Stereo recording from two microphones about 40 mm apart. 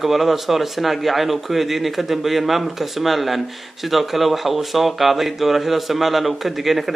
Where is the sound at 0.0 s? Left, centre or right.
Centre.